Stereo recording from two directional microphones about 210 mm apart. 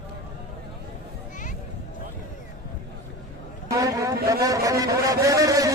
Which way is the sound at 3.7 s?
15° right (ahead or behind).